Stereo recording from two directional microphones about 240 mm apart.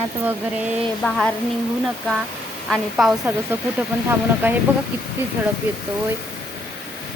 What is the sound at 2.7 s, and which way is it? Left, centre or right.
Speech, centre.